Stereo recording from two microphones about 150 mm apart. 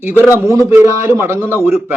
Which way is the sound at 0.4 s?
20° right (ahead or behind).